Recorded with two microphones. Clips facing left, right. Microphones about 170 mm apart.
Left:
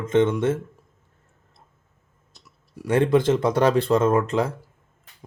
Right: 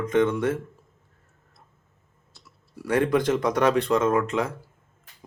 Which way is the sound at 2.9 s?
25° left (ahead or behind).